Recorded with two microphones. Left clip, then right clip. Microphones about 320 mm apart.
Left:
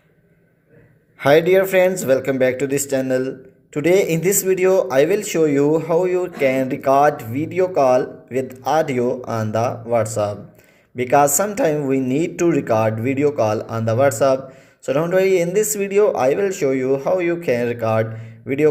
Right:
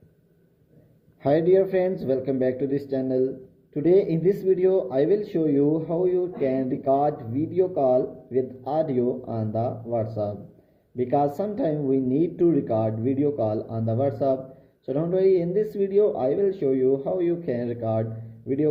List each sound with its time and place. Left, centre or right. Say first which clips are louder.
1.2 s speech: left 6 dB; left
13.4 s speech: left 7 dB; left
14.9 s speech: left 5 dB; left